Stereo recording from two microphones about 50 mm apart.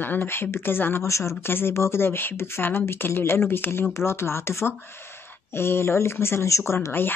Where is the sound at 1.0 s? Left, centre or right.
Left.